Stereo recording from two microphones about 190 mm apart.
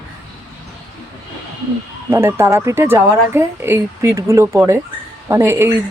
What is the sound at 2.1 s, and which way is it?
Speech, 15° right (ahead or behind).